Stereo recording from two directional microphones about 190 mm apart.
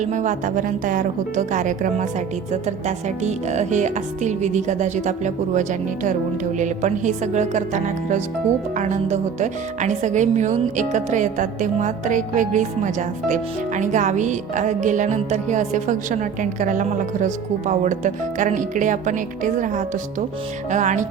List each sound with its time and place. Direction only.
0.0 s speech: 40° right (ahead or behind)